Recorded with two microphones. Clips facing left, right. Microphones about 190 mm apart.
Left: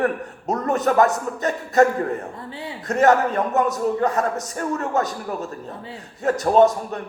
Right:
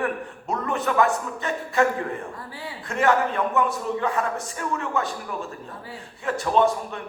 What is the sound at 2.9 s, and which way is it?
A man's voice, 40° left (ahead or behind).